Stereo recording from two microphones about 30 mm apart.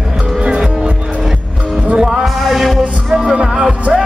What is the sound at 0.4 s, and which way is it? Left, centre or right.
Music, right.